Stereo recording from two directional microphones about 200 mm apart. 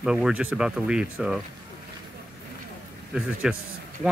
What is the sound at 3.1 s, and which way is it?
Speech, 5° right (ahead or behind).